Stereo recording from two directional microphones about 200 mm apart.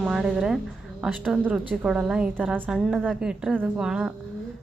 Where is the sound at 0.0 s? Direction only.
5° right (ahead or behind).